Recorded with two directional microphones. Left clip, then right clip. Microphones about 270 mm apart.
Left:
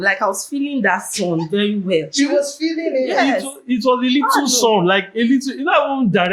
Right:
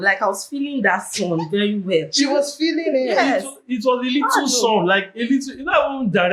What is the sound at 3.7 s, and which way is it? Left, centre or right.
Speech, left.